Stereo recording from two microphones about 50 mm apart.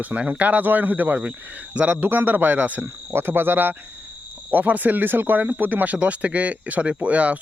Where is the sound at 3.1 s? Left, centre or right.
Right.